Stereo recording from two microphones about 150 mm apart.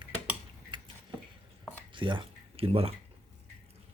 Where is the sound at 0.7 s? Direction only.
35° right (ahead or behind).